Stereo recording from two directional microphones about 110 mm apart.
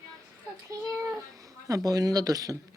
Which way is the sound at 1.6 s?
30° right (ahead or behind).